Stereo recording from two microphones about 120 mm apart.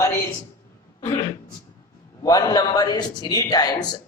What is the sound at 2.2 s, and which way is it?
A man's voice, 30° left (ahead or behind).